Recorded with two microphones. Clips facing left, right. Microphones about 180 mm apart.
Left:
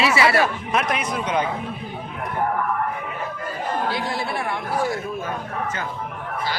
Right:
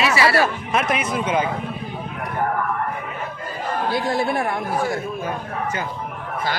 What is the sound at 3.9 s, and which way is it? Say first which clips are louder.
Speech: right 5 dB; 45° right (ahead or behind).